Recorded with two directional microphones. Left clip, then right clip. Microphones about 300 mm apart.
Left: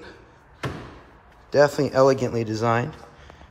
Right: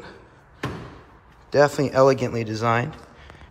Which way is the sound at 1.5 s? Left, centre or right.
Centre.